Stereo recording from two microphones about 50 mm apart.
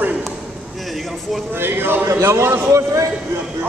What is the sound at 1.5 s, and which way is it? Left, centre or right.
Speech, right.